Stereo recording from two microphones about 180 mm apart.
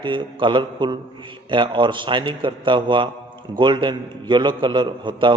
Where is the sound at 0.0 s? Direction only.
25° right (ahead or behind).